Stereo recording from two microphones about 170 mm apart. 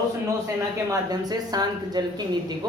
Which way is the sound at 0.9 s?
25° right (ahead or behind).